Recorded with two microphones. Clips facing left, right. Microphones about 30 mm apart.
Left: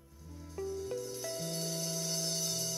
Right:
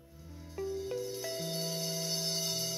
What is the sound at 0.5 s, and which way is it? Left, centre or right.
Music, right.